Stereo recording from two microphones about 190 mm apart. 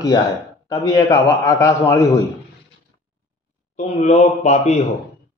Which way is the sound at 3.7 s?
35° left (ahead or behind).